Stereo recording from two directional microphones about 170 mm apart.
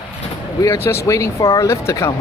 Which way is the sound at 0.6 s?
15° left (ahead or behind).